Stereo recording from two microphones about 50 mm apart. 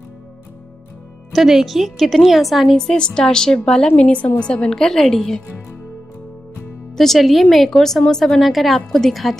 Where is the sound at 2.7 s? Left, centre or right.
Centre.